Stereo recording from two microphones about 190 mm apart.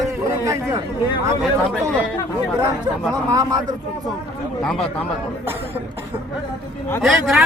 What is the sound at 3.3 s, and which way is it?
Speech, 15° right (ahead or behind).